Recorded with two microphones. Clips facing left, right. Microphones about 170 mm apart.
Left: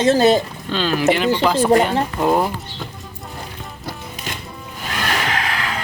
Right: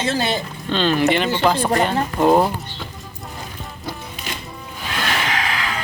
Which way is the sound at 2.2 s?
5° right (ahead or behind).